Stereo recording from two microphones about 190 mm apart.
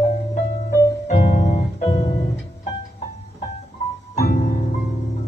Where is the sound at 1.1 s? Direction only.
35° left (ahead or behind).